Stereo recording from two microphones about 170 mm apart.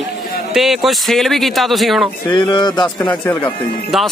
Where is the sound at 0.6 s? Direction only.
Centre (ahead or behind).